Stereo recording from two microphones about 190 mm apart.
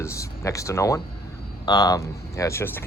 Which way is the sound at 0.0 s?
15° left (ahead or behind).